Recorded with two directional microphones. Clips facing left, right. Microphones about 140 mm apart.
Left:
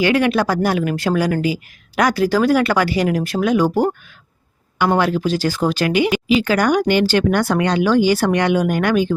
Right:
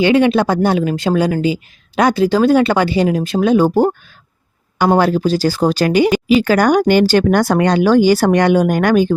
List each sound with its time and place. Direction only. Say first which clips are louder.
0.0 s speech: right 4 dB; 25° right (ahead or behind)
4.9 s speech: right 4 dB; 35° right (ahead or behind)